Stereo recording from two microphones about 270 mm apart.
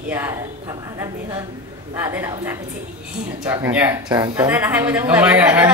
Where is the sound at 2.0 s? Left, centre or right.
Centre.